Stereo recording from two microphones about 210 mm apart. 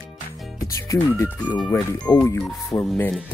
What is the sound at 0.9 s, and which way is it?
Speech, 15° left (ahead or behind).